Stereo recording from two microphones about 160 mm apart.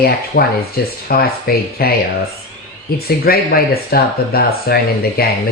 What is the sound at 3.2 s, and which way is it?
Speech, 70° left (ahead or behind).